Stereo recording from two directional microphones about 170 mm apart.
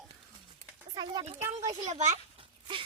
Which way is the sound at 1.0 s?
25° right (ahead or behind).